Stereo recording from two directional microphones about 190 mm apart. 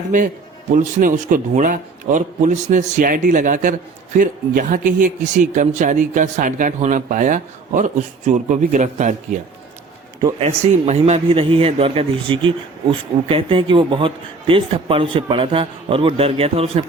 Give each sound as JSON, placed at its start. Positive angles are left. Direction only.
{"t": 0.7, "sound": "a man's voice", "side_deg": -40}
{"t": 10.4, "sound": "speech", "side_deg": -35}